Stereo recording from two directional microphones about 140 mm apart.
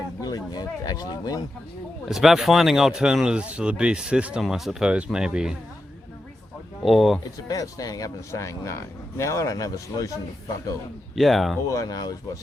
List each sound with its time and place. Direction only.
0.2 s a sound: 30° left (ahead or behind)
2.0 s speech: centre (ahead or behind)
6.8 s speech: centre (ahead or behind)
7.4 s speech: 25° left (ahead or behind)
11.1 s speech: centre (ahead or behind)
11.7 s speech: 25° left (ahead or behind)